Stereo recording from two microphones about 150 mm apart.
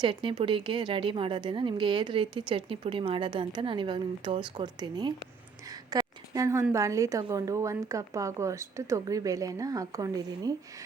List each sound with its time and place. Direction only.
0.0 s a woman's voice: 35° right (ahead or behind)
5.9 s a sound: 25° right (ahead or behind)
6.7 s a woman's voice: 20° right (ahead or behind)